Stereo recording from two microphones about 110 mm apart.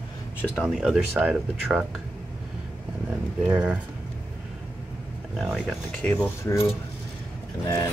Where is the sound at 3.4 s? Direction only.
10° right (ahead or behind).